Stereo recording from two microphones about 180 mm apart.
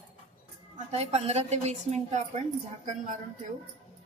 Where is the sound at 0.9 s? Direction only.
35° right (ahead or behind).